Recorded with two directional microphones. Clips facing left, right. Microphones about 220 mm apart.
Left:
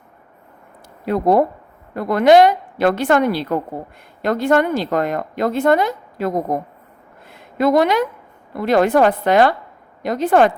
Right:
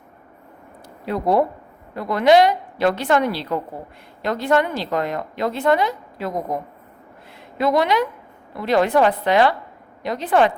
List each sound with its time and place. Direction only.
1.0 s speech: 50° left (ahead or behind)
7.6 s speech: 50° left (ahead or behind)